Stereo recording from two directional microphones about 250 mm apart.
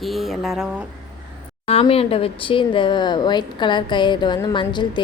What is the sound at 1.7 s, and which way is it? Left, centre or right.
A woman's voice, left.